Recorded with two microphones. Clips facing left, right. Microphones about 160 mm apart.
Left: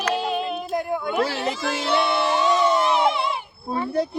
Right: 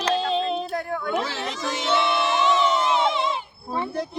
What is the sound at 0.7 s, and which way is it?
Speech, 10° left (ahead or behind).